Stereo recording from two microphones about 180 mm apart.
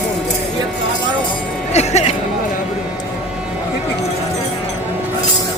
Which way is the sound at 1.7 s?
40° left (ahead or behind).